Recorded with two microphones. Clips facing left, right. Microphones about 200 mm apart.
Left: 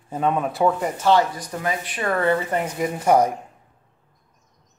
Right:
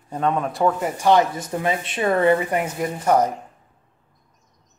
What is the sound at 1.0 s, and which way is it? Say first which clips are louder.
Speech: right 2 dB; 20° right (ahead or behind).